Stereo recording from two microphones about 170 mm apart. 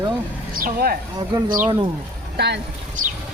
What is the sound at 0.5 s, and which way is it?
Speech, 60° right (ahead or behind).